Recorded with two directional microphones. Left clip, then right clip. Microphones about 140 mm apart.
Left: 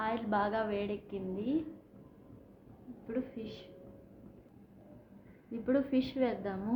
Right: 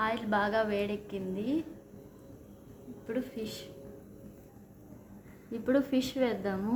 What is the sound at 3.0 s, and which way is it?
Speech, 20° right (ahead or behind).